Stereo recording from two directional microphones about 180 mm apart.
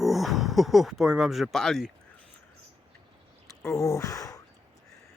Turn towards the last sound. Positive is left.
turn(degrees=20)  # may be behind; listen again after turning